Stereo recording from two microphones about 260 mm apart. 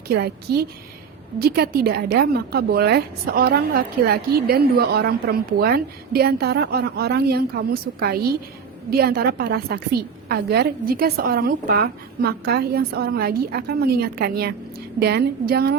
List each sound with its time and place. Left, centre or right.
0.1 s a woman's voice: right